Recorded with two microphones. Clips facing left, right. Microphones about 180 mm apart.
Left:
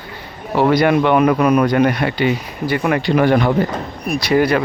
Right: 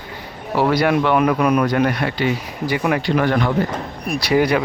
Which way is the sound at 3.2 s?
15° left (ahead or behind).